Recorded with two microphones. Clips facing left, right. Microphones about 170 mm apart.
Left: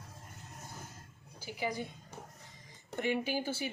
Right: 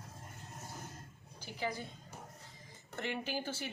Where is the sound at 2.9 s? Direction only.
10° left (ahead or behind).